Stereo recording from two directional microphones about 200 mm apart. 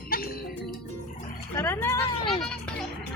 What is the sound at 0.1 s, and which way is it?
Music, 45° left (ahead or behind).